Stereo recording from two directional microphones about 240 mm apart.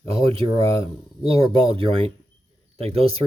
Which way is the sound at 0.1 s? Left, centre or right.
Right.